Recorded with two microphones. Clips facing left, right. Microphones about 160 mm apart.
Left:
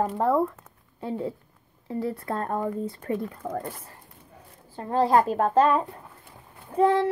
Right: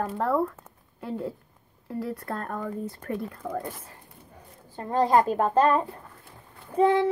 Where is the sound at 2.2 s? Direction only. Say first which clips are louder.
Left 4 dB; 25° left (ahead or behind).